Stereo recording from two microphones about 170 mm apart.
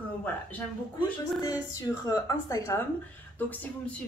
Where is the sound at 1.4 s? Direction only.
20° left (ahead or behind).